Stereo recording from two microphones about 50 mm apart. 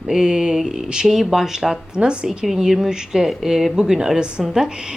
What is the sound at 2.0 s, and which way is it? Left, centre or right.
A woman's voice, centre.